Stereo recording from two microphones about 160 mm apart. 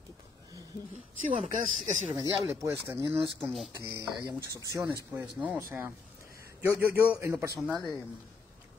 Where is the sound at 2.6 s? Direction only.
15° right (ahead or behind).